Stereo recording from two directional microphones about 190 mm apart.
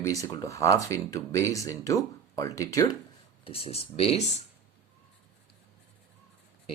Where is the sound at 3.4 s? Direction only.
30° left (ahead or behind).